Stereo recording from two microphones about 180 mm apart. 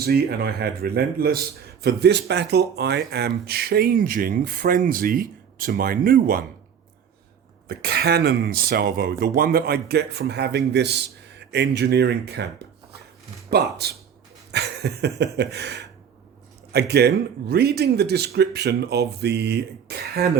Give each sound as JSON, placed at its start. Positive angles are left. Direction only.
{"t": 0.0, "sound": "a man's voice", "side_deg": -60}
{"t": 7.7, "sound": "a man's voice", "side_deg": -60}
{"t": 14.5, "sound": "a sound", "side_deg": -70}
{"t": 15.4, "sound": "a man's voice", "side_deg": -70}